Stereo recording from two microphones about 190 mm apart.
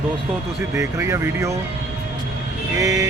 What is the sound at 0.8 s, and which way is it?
Speech, 15° right (ahead or behind).